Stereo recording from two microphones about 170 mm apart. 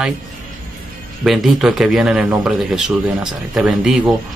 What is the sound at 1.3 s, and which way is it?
A man's voice, centre (ahead or behind).